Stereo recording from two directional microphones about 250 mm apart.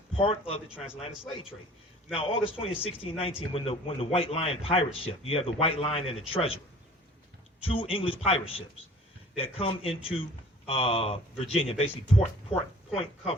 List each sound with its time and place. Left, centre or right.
0.2 s a man's voice: left
0.7 s a man's voice: centre
2.1 s a man's voice: left
7.6 s a man's voice: left